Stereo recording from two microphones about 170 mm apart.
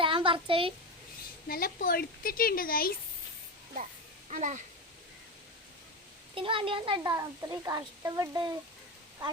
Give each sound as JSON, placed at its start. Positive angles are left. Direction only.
{"t": 0.0, "sound": "a child's voice", "side_deg": -30}
{"t": 1.5, "sound": "speech", "side_deg": 60}
{"t": 4.3, "sound": "speech", "side_deg": -45}
{"t": 6.3, "sound": "a woman's voice", "side_deg": -30}